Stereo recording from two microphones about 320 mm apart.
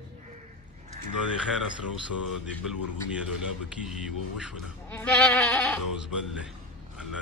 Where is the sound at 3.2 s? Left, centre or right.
Centre.